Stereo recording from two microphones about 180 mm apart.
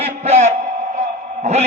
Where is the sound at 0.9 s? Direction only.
40° right (ahead or behind).